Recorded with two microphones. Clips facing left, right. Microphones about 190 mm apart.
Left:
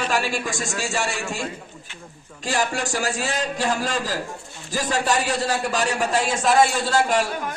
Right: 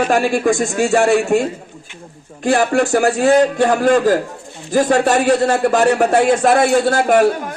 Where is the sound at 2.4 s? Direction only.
55° right (ahead or behind).